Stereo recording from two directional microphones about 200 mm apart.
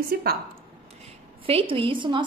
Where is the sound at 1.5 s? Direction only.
25° right (ahead or behind).